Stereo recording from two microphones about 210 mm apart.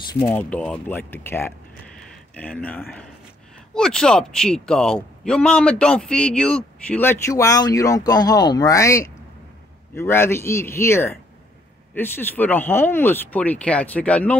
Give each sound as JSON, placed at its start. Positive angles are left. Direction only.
{"t": 0.1, "sound": "speech", "side_deg": 20}
{"t": 0.4, "sound": "speech", "side_deg": 5}